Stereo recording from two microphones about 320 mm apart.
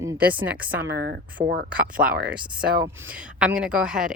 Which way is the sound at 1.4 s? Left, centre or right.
Centre.